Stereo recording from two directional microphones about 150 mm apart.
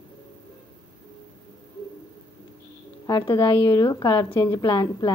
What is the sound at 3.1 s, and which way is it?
A woman's voice, 25° left (ahead or behind).